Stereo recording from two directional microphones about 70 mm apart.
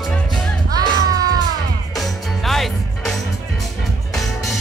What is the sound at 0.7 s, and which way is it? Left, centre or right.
Music, right.